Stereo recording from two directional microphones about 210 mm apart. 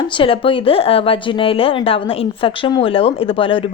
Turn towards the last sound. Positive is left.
turn(degrees=25)  # may be behind; listen again after turning